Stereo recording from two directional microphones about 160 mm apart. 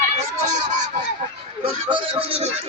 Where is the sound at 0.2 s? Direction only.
45° right (ahead or behind).